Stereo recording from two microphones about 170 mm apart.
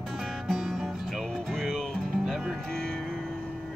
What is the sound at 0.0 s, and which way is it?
Music, centre (ahead or behind).